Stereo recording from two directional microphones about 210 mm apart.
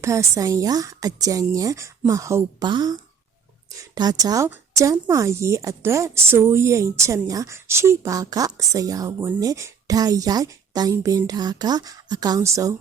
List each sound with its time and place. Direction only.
0.0 s a woman's voice: 15° right (ahead or behind)